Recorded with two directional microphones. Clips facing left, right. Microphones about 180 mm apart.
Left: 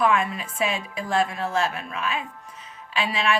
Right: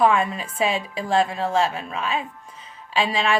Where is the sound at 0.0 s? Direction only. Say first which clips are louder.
Right 3 dB; 30° right (ahead or behind).